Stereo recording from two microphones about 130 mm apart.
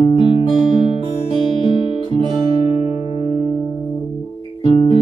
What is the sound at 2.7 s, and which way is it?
Music, 55° left (ahead or behind).